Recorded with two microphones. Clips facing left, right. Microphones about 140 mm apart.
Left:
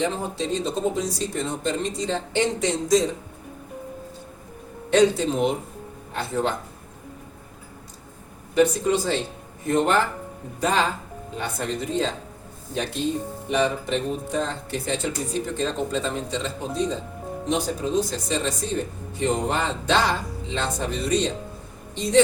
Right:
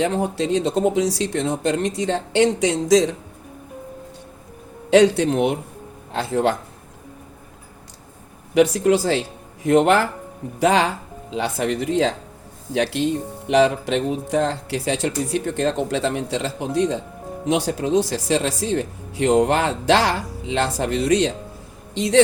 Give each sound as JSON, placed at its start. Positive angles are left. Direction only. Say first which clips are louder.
{"t": 0.0, "sound": "speech", "louder": "right 5 dB", "side_deg": -70}
{"t": 4.9, "sound": "speech", "louder": "right 4 dB", "side_deg": -75}
{"t": 6.1, "sound": "speech", "louder": "right 5 dB", "side_deg": -85}
{"t": 8.5, "sound": "speech", "louder": "right 4 dB", "side_deg": -80}